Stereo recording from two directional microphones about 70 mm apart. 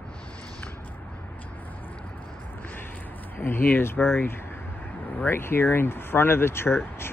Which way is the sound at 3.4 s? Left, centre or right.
Left.